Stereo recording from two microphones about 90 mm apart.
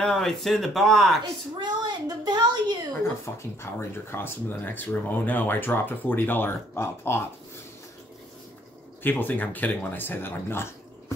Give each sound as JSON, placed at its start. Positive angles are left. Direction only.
{"t": 0.0, "sound": "speech", "side_deg": 5}
{"t": 1.6, "sound": "a sound", "side_deg": -50}
{"t": 3.3, "sound": "speech", "side_deg": 30}
{"t": 9.0, "sound": "speech", "side_deg": 20}